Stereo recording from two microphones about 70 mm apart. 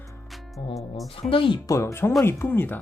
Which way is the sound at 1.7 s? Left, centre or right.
Left.